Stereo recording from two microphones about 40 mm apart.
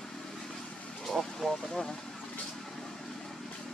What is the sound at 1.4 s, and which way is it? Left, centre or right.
Vehicle, centre.